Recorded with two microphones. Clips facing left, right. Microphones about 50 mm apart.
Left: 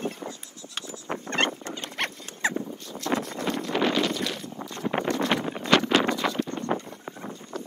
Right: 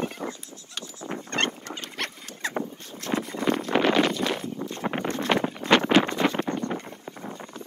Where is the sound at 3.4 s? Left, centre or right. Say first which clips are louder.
Right 6 dB; right.